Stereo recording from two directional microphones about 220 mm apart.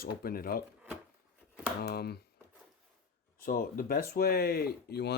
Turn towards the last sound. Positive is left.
turn(degrees=50)  # may be behind; listen again after turning